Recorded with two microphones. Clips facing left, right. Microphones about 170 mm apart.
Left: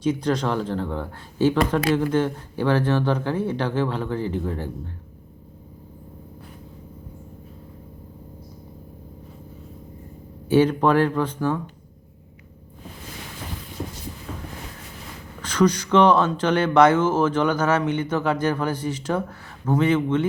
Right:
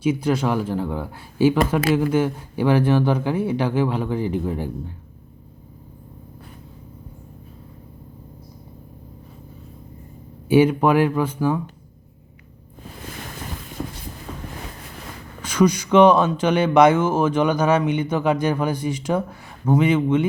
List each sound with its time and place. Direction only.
0.0 s speech: 10° right (ahead or behind)
10.5 s speech: 10° right (ahead or behind)
15.4 s speech: 10° right (ahead or behind)